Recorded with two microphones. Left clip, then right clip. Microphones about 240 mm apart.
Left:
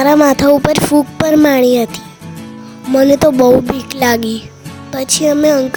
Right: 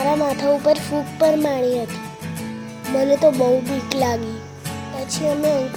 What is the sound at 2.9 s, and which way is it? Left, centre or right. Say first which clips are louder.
Music: left 6 dB; left.